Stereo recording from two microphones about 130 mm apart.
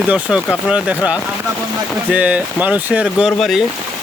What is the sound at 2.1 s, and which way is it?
Speech, 10° right (ahead or behind).